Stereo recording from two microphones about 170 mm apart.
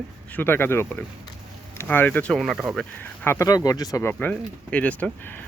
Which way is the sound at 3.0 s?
15° left (ahead or behind).